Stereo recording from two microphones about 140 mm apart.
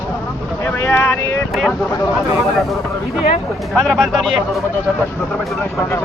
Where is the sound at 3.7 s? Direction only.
Centre (ahead or behind).